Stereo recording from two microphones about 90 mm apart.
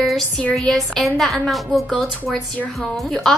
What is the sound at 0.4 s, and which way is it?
A woman's voice, 10° left (ahead or behind).